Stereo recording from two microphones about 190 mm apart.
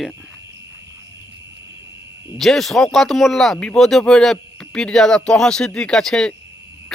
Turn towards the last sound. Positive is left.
turn(degrees=5)  # may be behind; listen again after turning